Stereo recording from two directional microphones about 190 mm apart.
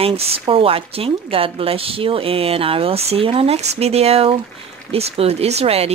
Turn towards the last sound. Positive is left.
turn(degrees=-30)  # may be behind; listen again after turning